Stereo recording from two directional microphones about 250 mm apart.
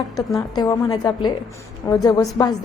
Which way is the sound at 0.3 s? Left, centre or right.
Centre.